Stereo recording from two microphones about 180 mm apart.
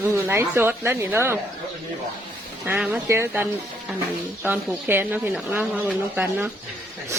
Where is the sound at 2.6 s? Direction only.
10° right (ahead or behind).